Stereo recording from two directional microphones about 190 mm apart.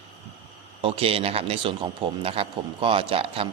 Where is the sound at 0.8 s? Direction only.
30° right (ahead or behind).